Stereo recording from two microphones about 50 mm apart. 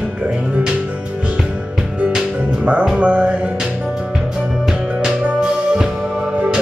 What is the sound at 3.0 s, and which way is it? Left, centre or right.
Music, right.